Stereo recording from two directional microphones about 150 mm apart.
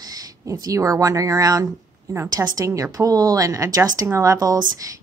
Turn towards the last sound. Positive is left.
turn(degrees=-25)  # may be behind; listen again after turning